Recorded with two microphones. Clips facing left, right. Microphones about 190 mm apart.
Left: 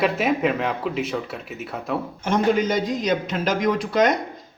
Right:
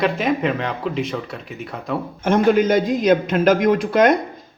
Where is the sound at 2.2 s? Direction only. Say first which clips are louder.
Right 5 dB; 55° right (ahead or behind).